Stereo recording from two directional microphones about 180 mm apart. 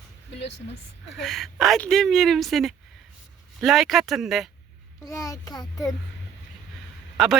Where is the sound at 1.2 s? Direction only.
Centre (ahead or behind).